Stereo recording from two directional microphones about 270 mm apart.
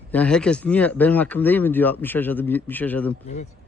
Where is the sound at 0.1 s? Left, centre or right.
Centre.